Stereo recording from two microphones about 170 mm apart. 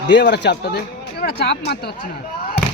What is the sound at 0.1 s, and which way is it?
Speech, 85° left.